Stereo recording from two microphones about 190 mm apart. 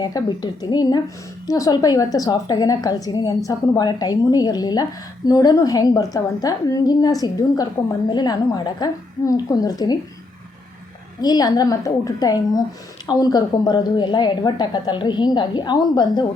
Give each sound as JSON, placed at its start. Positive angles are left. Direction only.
{"t": 0.0, "sound": "a woman's voice", "side_deg": 20}
{"t": 11.2, "sound": "a woman's voice", "side_deg": 20}